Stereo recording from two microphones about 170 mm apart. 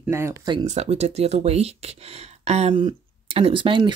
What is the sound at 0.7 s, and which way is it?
Speech, 40° right (ahead or behind).